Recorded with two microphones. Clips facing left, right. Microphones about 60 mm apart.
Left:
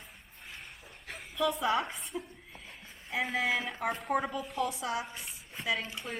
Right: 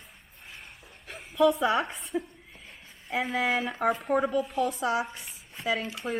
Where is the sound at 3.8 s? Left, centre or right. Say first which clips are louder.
Right 8 dB; right.